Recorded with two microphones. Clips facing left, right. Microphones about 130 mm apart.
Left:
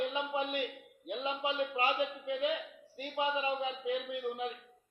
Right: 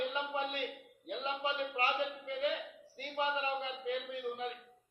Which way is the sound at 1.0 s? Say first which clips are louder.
Left 2 dB; 15° left (ahead or behind).